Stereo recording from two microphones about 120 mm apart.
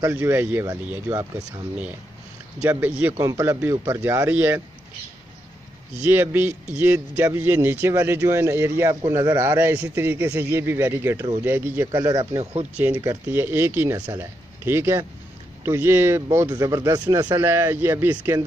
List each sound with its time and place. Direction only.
0.1 s speech: 15° right (ahead or behind)
3.2 s a man's voice: 30° right (ahead or behind)
5.9 s a man's voice: 15° right (ahead or behind)
11.9 s speech: 35° right (ahead or behind)
12.7 s a man's voice: 15° right (ahead or behind); by 17.4 s 35° right (ahead or behind)
17.4 s a man's voice: 20° right (ahead or behind)